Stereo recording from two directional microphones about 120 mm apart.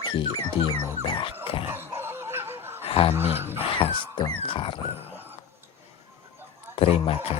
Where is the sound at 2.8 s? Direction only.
50° left (ahead or behind).